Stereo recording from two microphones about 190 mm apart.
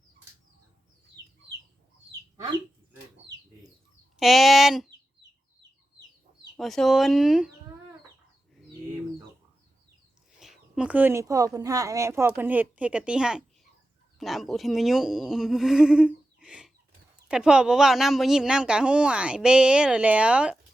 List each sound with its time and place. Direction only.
1.2 s chicken: 20° right (ahead or behind)
4.2 s speech: centre (ahead or behind)
6.6 s speech: centre (ahead or behind)
10.4 s speech: 5° right (ahead or behind)